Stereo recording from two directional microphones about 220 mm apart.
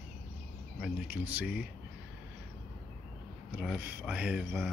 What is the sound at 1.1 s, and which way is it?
Speech, 10° right (ahead or behind).